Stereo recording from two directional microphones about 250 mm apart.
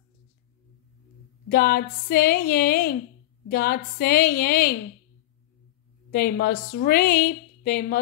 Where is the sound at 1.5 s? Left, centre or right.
Left.